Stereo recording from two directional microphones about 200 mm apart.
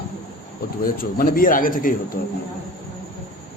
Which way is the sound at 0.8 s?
45° left (ahead or behind).